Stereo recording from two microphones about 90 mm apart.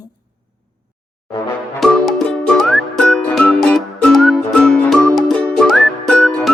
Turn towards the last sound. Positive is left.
turn(degrees=10)  # may be behind; listen again after turning